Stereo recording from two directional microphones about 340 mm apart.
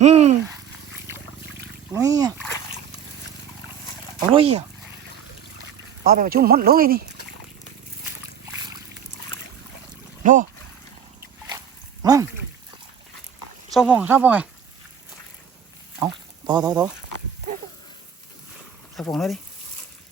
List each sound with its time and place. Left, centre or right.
0.0 s speech: centre
1.9 s speech: centre
4.4 s speech: centre
6.0 s speech: right
12.0 s speech: centre
13.7 s speech: centre
16.0 s speech: centre
18.9 s speech: centre